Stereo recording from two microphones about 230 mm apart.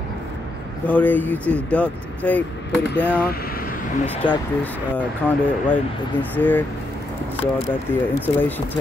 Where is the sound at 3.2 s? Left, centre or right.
Left.